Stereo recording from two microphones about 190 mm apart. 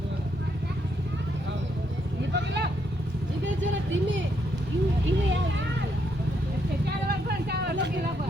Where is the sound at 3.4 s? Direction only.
75° right (ahead or behind).